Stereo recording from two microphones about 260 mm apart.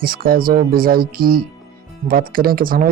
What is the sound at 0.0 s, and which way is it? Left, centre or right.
Speech, right.